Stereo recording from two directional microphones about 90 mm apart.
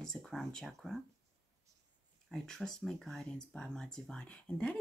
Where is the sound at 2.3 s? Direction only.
5° left (ahead or behind).